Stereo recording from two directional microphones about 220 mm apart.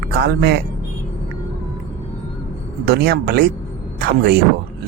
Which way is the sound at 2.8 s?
45° right (ahead or behind).